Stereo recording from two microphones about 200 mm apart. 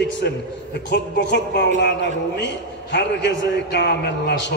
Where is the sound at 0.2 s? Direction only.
50° left (ahead or behind).